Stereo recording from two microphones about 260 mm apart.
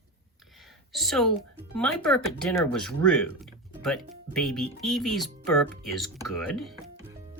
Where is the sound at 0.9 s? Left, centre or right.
Centre.